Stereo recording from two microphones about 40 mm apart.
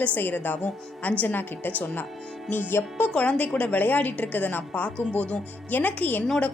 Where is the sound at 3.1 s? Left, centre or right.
Left.